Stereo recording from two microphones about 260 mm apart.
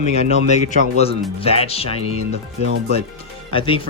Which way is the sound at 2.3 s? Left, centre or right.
Right.